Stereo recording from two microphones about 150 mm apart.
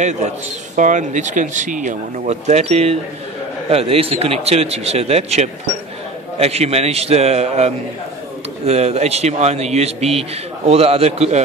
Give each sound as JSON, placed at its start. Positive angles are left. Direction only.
{"t": 0.7, "sound": "speech", "side_deg": -55}